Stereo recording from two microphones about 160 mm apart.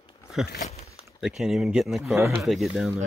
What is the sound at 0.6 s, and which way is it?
Speech, 45° left (ahead or behind).